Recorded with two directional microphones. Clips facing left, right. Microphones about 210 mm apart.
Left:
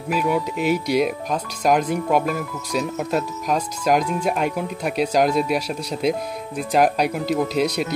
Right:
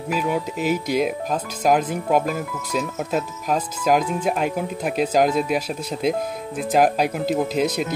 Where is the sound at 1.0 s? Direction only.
Centre (ahead or behind).